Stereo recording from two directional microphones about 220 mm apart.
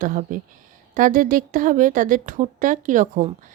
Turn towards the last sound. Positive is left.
turn(degrees=-35)  # may be behind; listen again after turning